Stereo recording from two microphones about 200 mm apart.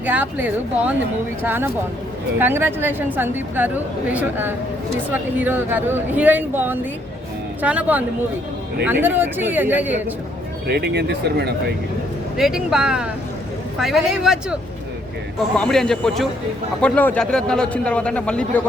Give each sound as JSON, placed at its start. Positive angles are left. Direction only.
{"t": 0.0, "sound": "speech", "side_deg": -10}
{"t": 10.7, "sound": "speech", "side_deg": -55}
{"t": 12.4, "sound": "speech", "side_deg": -5}